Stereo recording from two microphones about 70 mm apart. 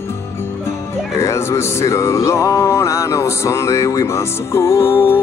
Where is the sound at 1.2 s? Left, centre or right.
Left.